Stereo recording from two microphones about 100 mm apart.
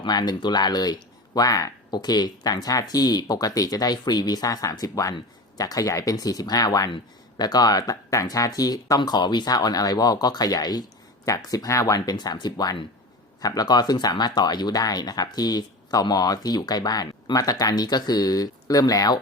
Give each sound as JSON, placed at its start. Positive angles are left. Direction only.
{"t": 0.0, "sound": "speech", "side_deg": 45}